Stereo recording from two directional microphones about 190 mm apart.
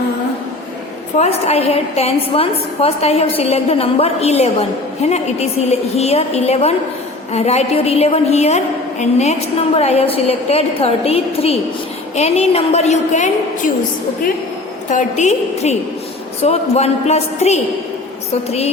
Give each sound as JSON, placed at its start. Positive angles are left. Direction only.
{"t": 1.2, "sound": "a woman's voice", "side_deg": 35}
{"t": 14.8, "sound": "a woman's voice", "side_deg": 40}